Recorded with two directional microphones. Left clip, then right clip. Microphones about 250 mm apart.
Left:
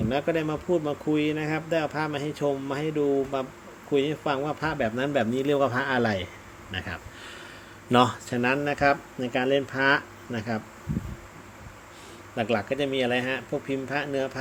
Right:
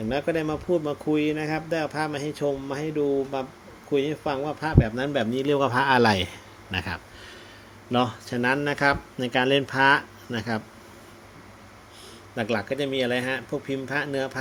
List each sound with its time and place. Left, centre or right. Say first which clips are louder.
0.1 s speech: right 1 dB; centre; by 7.0 s right
7.9 s speech: left 4 dB; left
8.3 s speech: right 1 dB; centre
12.4 s speech: even; centre